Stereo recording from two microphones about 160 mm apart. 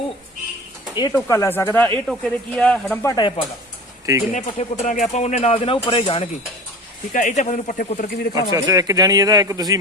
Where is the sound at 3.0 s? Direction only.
25° left (ahead or behind).